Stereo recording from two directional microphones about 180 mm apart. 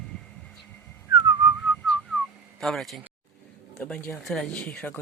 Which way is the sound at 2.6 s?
Centre (ahead or behind).